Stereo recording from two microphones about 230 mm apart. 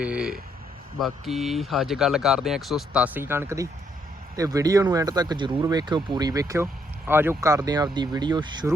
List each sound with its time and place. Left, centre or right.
0.0 s speech: centre